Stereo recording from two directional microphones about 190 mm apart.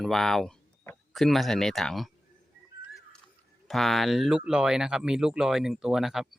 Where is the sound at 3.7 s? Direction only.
Centre (ahead or behind).